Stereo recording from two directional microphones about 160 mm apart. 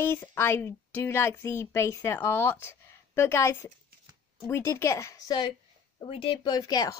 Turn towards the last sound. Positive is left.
turn(degrees=20)  # may be behind; listen again after turning